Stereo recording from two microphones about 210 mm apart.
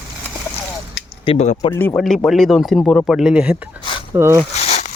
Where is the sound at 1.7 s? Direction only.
10° left (ahead or behind); by 4.3 s 10° right (ahead or behind).